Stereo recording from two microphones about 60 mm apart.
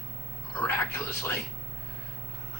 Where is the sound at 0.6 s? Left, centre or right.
Left.